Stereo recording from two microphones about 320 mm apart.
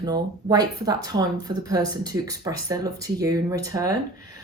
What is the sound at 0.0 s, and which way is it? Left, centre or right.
Speech, centre.